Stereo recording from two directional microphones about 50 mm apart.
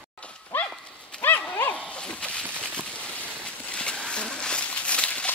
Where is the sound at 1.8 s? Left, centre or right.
Left.